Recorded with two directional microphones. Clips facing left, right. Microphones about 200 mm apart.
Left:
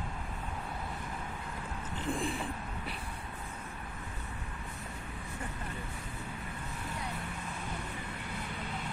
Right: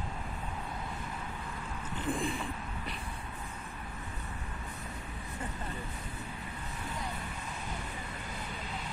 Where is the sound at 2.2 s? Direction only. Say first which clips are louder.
Even; centre (ahead or behind).